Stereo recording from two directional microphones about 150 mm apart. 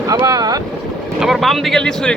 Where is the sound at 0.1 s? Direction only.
25° right (ahead or behind).